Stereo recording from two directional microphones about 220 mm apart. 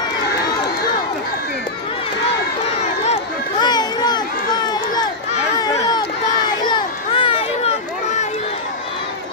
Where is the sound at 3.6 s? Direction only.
20° left (ahead or behind).